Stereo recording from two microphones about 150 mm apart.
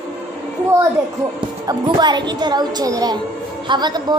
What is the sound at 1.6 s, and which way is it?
A woman's voice, 30° right (ahead or behind).